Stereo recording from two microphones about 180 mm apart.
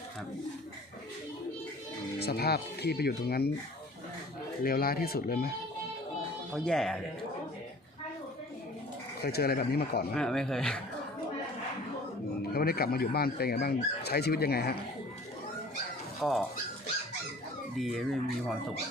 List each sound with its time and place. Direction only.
2.1 s speech: 60° left (ahead or behind)
4.6 s speech: 55° left (ahead or behind)
6.5 s speech: 5° left (ahead or behind)
9.2 s speech: 60° left (ahead or behind)
10.2 s speech: 5° left (ahead or behind)
12.4 s speech: 60° left (ahead or behind)
16.2 s speech: 5° left (ahead or behind)
17.7 s speech: centre (ahead or behind)